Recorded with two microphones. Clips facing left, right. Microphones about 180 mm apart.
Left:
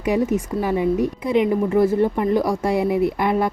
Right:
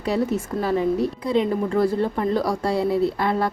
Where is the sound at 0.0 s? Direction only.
15° left (ahead or behind).